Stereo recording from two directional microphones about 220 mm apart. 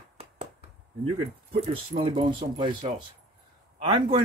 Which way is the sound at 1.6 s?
25° right (ahead or behind).